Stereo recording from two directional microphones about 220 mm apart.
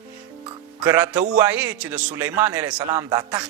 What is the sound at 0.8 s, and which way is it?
A man's voice, 5° right (ahead or behind).